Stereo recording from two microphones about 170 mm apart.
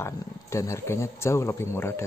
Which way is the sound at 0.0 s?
15° left (ahead or behind).